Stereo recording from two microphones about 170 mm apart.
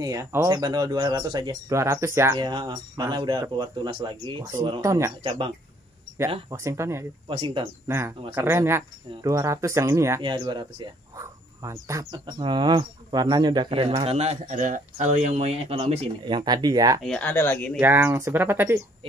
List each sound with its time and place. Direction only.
0.0 s speech: 20° right (ahead or behind)
2.4 s speech: 25° right (ahead or behind)
4.8 s speech: 15° right (ahead or behind)
5.2 s speech: 35° right (ahead or behind)
6.5 s speech: 15° right (ahead or behind)
7.2 s speech: 30° right (ahead or behind)
8.4 s speech: 15° right (ahead or behind)
17.0 s speech: 5° left (ahead or behind)
17.7 s speech: 10° right (ahead or behind)